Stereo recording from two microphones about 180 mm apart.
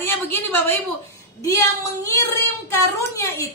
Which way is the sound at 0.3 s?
10° left (ahead or behind).